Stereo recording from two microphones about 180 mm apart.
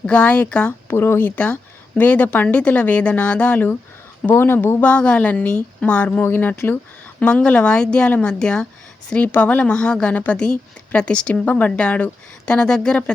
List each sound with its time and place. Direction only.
0.0 s a woman's voice: 5° left (ahead or behind)